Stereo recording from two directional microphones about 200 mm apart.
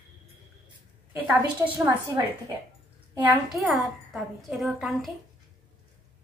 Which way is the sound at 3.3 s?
Centre (ahead or behind).